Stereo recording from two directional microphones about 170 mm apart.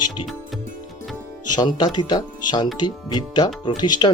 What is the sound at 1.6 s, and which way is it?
Speech, 25° left (ahead or behind).